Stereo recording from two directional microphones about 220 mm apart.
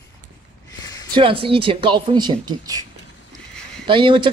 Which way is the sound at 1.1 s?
25° right (ahead or behind).